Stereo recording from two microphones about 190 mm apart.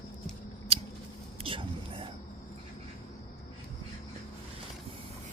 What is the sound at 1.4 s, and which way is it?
Whispering, 30° right (ahead or behind).